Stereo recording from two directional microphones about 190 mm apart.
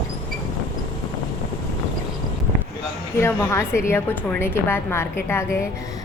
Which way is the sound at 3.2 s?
15° left (ahead or behind).